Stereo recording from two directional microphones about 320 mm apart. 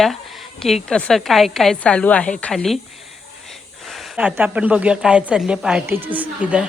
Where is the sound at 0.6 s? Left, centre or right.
Centre.